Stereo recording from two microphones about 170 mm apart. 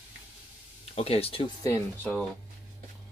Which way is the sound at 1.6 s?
15° left (ahead or behind).